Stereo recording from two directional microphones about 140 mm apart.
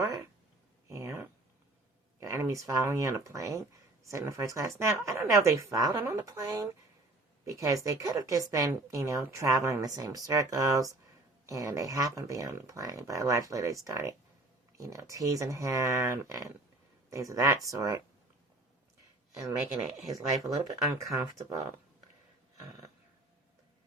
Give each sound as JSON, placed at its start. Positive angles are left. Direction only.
{"t": 0.9, "sound": "a sound", "side_deg": -20}
{"t": 2.2, "sound": "speech", "side_deg": -20}
{"t": 20.1, "sound": "speech", "side_deg": -25}